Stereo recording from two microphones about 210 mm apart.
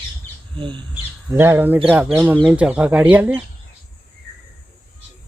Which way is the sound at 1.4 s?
10° right (ahead or behind).